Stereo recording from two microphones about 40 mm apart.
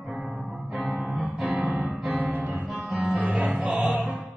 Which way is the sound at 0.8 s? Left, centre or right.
Right.